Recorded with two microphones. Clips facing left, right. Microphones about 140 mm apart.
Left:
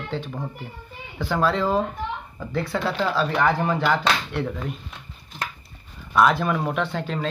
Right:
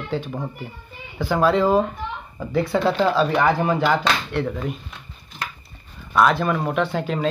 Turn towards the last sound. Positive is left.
turn(degrees=-10)  # may be behind; listen again after turning